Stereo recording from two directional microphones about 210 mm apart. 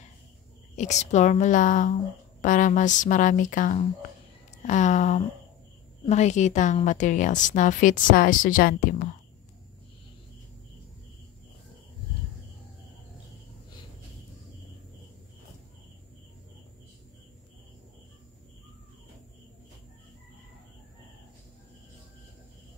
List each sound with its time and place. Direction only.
0.7 s a woman's voice: 35° left (ahead or behind)